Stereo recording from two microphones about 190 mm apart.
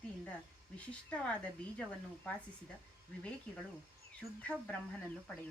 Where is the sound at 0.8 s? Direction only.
5° left (ahead or behind).